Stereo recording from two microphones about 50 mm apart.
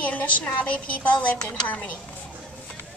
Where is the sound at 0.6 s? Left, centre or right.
Left.